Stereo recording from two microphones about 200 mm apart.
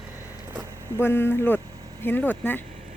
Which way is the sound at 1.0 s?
10° left (ahead or behind).